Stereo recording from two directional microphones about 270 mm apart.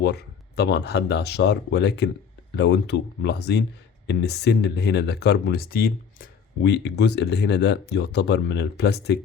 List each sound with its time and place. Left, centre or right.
0.0 s speech: left